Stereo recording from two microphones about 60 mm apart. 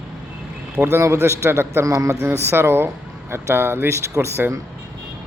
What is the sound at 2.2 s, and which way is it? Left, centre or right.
A man's voice, right.